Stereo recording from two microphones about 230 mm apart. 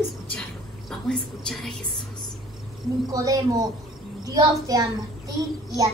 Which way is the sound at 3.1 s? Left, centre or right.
Centre.